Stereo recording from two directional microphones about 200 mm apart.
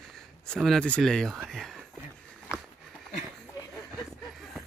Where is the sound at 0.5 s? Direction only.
5° left (ahead or behind).